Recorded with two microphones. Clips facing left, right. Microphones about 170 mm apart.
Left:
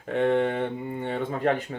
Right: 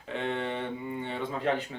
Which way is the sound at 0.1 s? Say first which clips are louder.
Left 9 dB; 50° left (ahead or behind).